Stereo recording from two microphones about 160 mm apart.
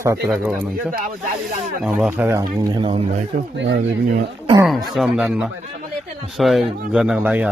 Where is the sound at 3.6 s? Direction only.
75° right (ahead or behind).